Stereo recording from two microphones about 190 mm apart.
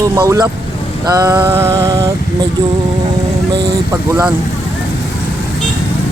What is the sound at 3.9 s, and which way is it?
Music, 15° right (ahead or behind).